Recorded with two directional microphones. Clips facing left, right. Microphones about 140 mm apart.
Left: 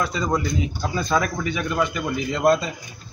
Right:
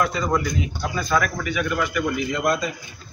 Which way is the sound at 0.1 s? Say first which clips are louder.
Even; 25° left (ahead or behind).